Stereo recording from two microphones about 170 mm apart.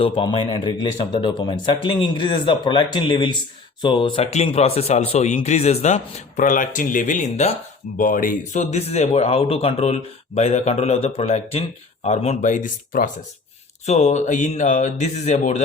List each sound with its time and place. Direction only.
0.0 s a man's voice: 30° left (ahead or behind)
7.9 s speech: 55° left (ahead or behind)